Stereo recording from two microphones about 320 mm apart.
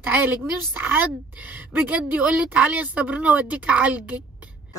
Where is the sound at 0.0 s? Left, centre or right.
Centre.